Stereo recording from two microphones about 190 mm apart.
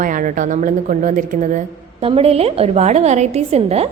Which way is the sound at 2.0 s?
30° right (ahead or behind).